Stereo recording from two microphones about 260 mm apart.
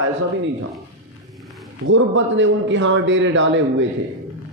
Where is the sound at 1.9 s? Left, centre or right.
Right.